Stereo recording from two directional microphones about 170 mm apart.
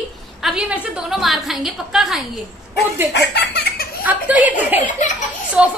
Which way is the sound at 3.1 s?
75° left (ahead or behind).